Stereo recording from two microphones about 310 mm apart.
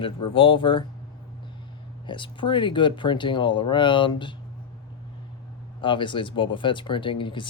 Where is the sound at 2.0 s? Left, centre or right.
Centre.